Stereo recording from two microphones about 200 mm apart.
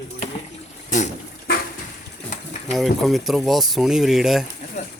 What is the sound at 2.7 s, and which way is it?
Speech, centre (ahead or behind).